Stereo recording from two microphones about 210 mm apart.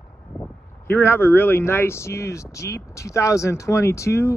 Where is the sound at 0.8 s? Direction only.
10° left (ahead or behind).